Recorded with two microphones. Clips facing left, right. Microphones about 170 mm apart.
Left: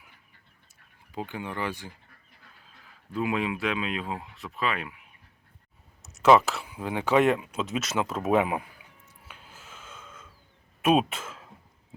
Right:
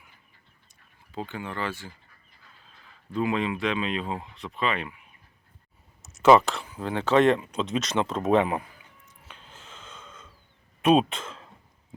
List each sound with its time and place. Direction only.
1.1 s speech: 15° left (ahead or behind)
3.1 s speech: 10° left (ahead or behind)
6.0 s speech: centre (ahead or behind)
9.2 s snort: 10° left (ahead or behind)
10.8 s speech: 5° left (ahead or behind)